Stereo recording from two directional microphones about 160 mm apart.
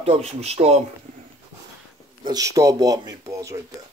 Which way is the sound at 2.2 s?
20° right (ahead or behind).